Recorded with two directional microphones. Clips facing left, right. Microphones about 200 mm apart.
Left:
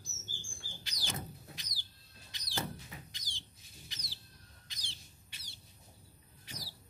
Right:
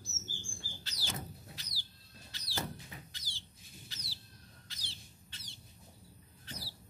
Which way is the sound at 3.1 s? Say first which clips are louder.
Even; 15° left (ahead or behind).